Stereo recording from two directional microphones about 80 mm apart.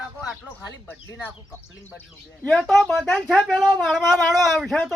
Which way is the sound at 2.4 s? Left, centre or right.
Centre.